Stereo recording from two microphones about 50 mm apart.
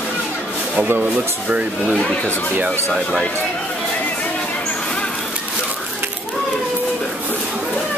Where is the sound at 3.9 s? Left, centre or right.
Left.